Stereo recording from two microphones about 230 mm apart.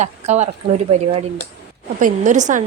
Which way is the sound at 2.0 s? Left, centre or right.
Right.